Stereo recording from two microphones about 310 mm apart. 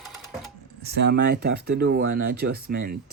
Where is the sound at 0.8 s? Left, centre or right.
Right.